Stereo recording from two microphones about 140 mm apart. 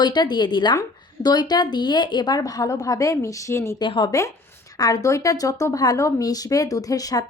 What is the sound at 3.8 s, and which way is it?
A woman's voice, 35° left (ahead or behind).